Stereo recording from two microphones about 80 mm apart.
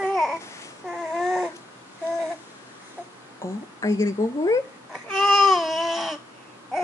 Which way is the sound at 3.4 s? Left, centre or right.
Left.